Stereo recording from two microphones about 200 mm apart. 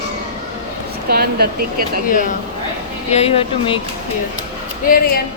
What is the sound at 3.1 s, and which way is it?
Speech, 30° left (ahead or behind).